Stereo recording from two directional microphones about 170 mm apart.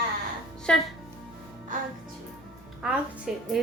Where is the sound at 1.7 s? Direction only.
50° right (ahead or behind).